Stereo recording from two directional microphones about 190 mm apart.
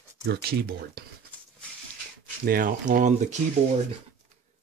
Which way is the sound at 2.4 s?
50° right (ahead or behind).